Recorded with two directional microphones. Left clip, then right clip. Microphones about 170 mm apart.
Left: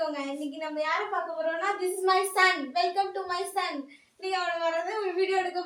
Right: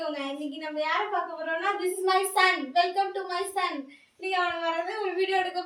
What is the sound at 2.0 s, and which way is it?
Speech, centre (ahead or behind).